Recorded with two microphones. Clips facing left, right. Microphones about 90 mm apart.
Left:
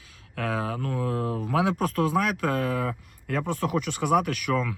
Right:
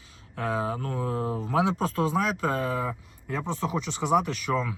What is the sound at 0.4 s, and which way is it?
Speech, 25° right (ahead or behind).